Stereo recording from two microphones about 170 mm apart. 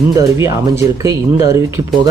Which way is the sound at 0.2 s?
15° right (ahead or behind).